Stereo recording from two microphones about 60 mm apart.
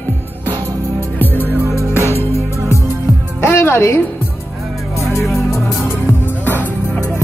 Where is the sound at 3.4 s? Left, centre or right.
Left.